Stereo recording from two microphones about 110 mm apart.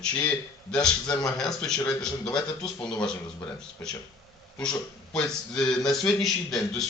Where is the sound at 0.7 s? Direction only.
10° left (ahead or behind).